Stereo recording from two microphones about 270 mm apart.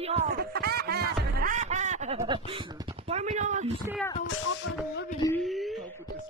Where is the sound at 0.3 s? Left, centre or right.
Right.